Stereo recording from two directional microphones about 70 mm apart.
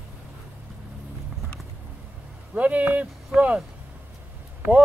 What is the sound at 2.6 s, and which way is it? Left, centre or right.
Speech, right.